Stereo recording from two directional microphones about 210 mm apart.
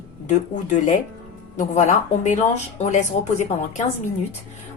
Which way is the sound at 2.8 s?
35° left (ahead or behind).